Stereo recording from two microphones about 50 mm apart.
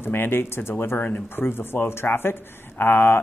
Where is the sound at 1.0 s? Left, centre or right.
Left.